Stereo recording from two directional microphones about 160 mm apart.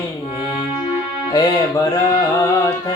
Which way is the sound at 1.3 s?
20° left (ahead or behind).